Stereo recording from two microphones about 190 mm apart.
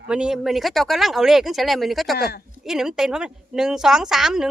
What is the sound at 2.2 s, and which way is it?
Speech, 55° left (ahead or behind).